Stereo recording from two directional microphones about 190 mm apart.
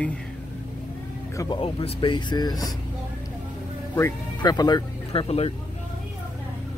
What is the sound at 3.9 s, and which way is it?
Speech, 15° left (ahead or behind).